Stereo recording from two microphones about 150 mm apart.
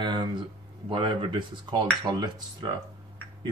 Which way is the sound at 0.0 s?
30° right (ahead or behind).